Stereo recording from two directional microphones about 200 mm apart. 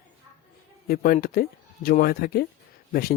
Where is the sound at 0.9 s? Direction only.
45° left (ahead or behind).